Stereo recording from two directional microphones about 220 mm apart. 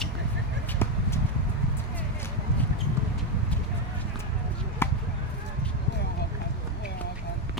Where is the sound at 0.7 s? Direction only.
10° left (ahead or behind).